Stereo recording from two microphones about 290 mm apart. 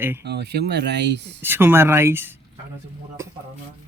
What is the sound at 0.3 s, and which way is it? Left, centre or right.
Speech, right.